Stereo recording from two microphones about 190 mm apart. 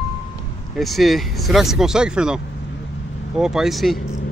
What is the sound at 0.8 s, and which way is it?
Speech, centre (ahead or behind).